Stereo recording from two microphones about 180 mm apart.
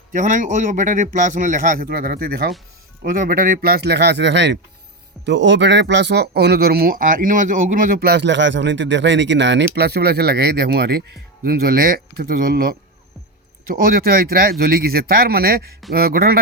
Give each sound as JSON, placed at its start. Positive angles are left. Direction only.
{"t": 0.1, "sound": "speech", "side_deg": -45}
{"t": 13.7, "sound": "speech", "side_deg": -55}